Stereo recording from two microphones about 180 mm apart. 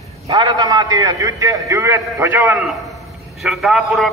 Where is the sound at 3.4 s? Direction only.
Centre (ahead or behind).